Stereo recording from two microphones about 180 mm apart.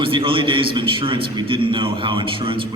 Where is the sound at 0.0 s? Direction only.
30° right (ahead or behind).